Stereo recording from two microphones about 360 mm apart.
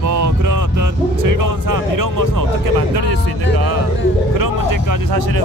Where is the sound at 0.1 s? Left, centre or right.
Right.